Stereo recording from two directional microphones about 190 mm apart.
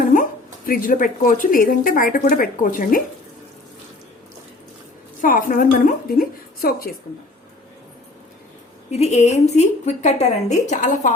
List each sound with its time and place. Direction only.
0.0 s a woman's voice: 45° left (ahead or behind)
5.2 s speech: 45° left (ahead or behind)
8.9 s a woman's voice: 35° left (ahead or behind)